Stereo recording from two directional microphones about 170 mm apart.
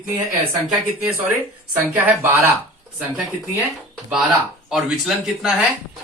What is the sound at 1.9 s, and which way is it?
Speech, 10° right (ahead or behind).